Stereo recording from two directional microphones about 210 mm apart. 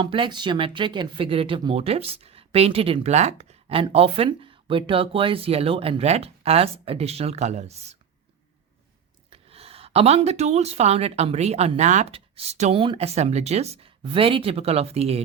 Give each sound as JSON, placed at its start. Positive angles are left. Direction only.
{"t": 0.0, "sound": "speech", "side_deg": -25}
{"t": 9.3, "sound": "speech", "side_deg": -30}